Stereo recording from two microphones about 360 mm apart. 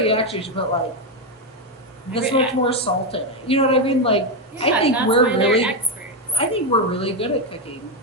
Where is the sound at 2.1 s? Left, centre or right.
Centre.